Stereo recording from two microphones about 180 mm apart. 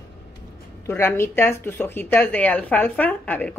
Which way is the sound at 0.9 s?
10° left (ahead or behind).